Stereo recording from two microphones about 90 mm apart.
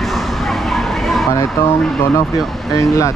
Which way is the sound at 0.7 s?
Centre (ahead or behind).